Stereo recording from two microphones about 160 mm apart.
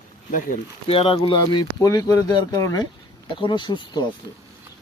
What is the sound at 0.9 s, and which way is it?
Speech, 35° left (ahead or behind).